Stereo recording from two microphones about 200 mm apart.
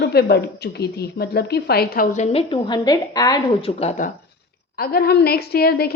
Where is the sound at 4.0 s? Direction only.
40° left (ahead or behind).